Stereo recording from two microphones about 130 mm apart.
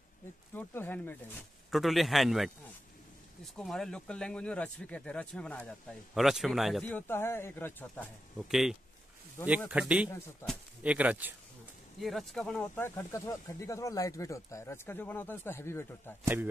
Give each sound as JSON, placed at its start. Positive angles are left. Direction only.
{"t": 0.6, "sound": "speech", "side_deg": 15}
{"t": 1.7, "sound": "a man's voice", "side_deg": 0}
{"t": 3.5, "sound": "speech", "side_deg": 5}
{"t": 6.1, "sound": "a man's voice", "side_deg": 0}
{"t": 6.9, "sound": "speech", "side_deg": 15}
{"t": 8.5, "sound": "a man's voice", "side_deg": -5}
{"t": 12.0, "sound": "a man's voice", "side_deg": 0}
{"t": 12.7, "sound": "speech", "side_deg": 15}